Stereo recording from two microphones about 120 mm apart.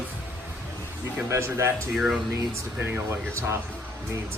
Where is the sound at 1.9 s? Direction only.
5° right (ahead or behind).